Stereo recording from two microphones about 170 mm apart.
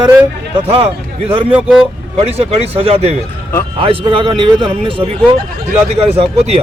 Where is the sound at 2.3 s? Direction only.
35° right (ahead or behind).